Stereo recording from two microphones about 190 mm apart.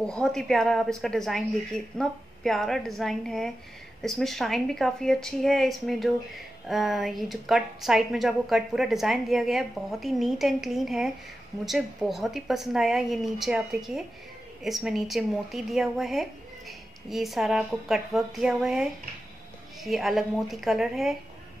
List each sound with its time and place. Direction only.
0.0 s a woman's voice: 5° left (ahead or behind)